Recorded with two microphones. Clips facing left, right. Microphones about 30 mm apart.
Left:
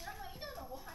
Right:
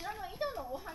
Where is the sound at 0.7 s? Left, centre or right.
Right.